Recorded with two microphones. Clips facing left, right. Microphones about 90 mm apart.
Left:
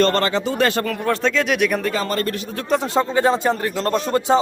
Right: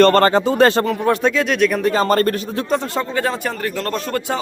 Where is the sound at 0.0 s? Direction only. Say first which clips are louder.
Right 6 dB; 50° right (ahead or behind).